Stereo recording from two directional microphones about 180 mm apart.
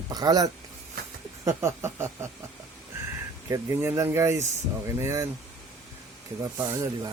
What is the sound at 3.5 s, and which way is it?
Speech, 15° right (ahead or behind).